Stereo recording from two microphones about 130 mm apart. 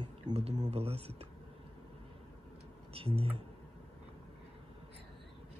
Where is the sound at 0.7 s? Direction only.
50° right (ahead or behind).